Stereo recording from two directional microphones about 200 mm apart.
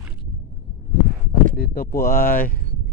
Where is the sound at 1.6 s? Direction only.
50° left (ahead or behind).